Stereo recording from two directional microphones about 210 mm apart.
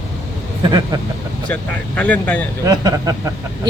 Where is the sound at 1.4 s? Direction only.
5° left (ahead or behind).